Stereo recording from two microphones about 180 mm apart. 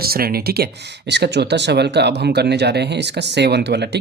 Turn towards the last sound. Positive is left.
turn(degrees=-70)  # may be behind; listen again after turning